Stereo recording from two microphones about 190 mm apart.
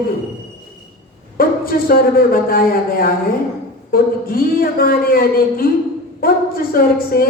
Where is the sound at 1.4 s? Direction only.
50° left (ahead or behind).